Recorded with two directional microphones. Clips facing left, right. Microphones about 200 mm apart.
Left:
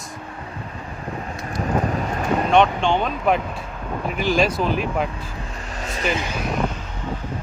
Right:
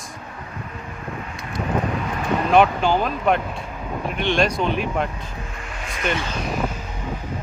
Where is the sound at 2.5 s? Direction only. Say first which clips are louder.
Right 1 dB; 5° right (ahead or behind).